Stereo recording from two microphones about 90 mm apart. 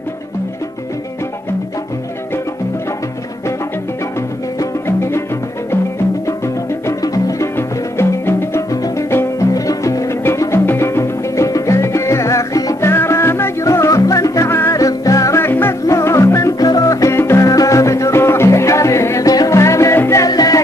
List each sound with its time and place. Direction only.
4.8 s music: 30° left (ahead or behind)
6.2 s music: 35° left (ahead or behind)
7.5 s music: 25° left (ahead or behind)
12.8 s music: 25° left (ahead or behind)
20.2 s music: 45° left (ahead or behind)